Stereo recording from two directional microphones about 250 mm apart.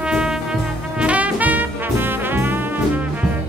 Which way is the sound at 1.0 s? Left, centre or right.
Centre.